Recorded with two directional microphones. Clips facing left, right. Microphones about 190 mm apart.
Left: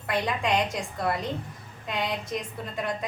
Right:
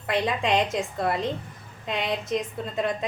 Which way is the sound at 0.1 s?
20° right (ahead or behind).